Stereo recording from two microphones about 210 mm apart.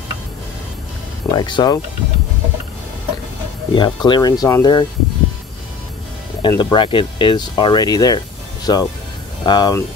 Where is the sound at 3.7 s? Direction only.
20° left (ahead or behind).